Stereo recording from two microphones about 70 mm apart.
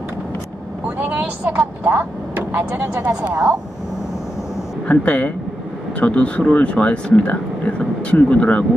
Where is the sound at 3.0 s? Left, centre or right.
Centre.